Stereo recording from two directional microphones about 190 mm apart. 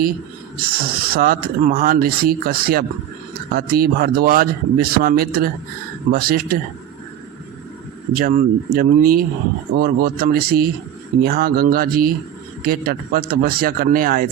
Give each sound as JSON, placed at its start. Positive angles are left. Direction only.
{"t": 0.6, "sound": "speech", "side_deg": -50}
{"t": 8.1, "sound": "speech", "side_deg": -45}